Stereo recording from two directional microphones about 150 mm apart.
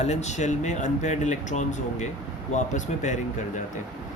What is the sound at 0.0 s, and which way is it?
Speech, 50° left (ahead or behind).